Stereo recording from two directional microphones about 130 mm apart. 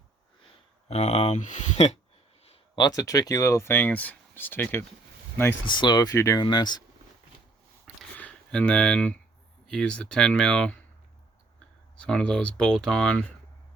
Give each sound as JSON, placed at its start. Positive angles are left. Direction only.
{"t": 0.9, "sound": "speech", "side_deg": 55}
{"t": 2.7, "sound": "speech", "side_deg": 30}
{"t": 5.6, "sound": "speech", "side_deg": 35}
{"t": 7.9, "sound": "a sound", "side_deg": -10}
{"t": 8.2, "sound": "speech", "side_deg": 10}
{"t": 11.9, "sound": "speech", "side_deg": 5}